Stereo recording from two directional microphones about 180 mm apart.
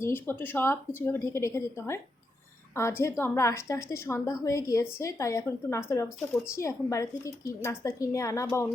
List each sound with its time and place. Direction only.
0.0 s a woman's voice: 10° left (ahead or behind)
3.0 s a woman's voice: 15° left (ahead or behind)